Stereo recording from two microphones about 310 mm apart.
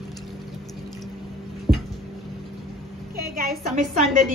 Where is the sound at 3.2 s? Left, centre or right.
Right.